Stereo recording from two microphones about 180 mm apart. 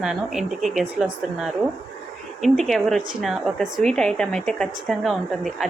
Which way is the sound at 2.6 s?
Centre (ahead or behind).